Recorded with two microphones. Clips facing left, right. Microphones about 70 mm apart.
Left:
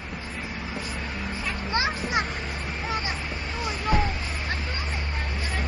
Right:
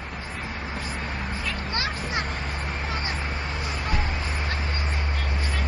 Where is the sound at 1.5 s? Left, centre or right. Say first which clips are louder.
Left 4 dB; left.